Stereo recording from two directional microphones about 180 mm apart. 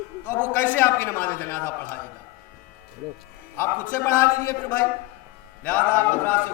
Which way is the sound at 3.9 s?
15° left (ahead or behind).